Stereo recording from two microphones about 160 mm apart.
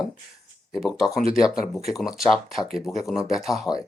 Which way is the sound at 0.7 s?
Centre (ahead or behind).